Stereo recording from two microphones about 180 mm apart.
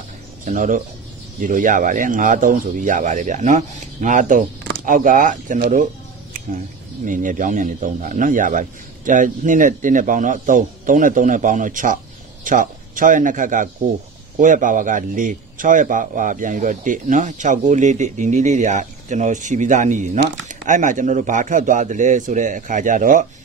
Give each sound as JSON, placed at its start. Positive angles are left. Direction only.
{"t": 0.5, "sound": "speech", "side_deg": -50}
{"t": 7.1, "sound": "speech", "side_deg": -45}